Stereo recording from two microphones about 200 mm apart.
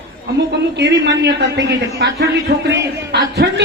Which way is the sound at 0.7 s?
60° right (ahead or behind).